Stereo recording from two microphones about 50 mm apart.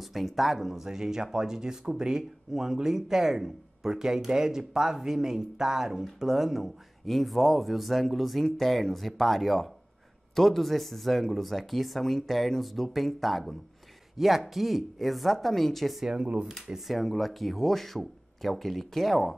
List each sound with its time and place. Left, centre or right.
0.1 s speech: centre
16.1 s speech: centre
16.4 s speech: centre